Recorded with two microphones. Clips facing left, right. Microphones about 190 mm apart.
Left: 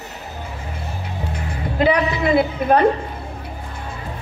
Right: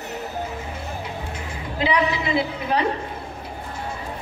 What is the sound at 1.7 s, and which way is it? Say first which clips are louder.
A woman's voice: left 4 dB; 50° left (ahead or behind).